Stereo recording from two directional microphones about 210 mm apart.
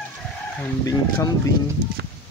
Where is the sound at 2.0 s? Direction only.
50° right (ahead or behind).